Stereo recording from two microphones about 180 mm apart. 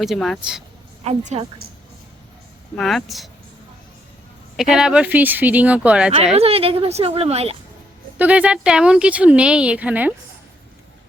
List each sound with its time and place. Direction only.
0.0 s speech: centre (ahead or behind)
1.0 s a woman's voice: 40° right (ahead or behind)
2.7 s speech: centre (ahead or behind)
4.5 s speech: 5° right (ahead or behind)
6.3 s a woman's voice: 35° right (ahead or behind)
8.2 s speech: 5° right (ahead or behind)